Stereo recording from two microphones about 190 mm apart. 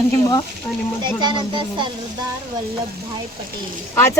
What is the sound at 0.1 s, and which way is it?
Speech, 20° left (ahead or behind).